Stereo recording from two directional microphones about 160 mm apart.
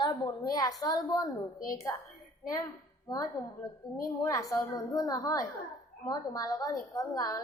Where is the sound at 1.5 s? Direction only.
60° left (ahead or behind).